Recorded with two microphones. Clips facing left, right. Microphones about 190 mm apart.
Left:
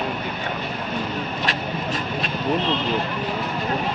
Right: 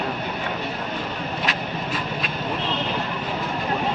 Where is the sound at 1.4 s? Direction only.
45° left (ahead or behind).